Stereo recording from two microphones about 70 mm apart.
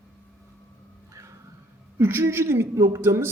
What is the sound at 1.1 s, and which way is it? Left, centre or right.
Music, right.